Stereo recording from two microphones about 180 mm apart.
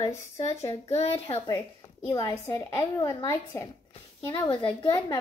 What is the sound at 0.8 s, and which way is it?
Speech, 35° left (ahead or behind).